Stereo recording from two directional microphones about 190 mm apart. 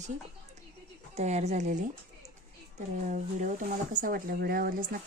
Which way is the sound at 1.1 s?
35° right (ahead or behind).